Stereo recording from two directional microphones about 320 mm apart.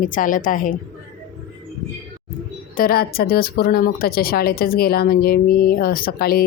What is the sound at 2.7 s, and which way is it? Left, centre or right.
Speech, left.